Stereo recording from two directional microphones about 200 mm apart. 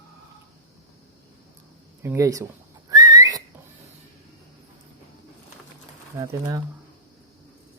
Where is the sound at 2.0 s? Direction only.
15° right (ahead or behind).